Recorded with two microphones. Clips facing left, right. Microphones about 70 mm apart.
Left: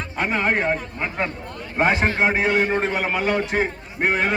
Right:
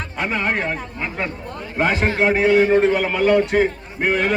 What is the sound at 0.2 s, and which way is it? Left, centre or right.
Speech, left.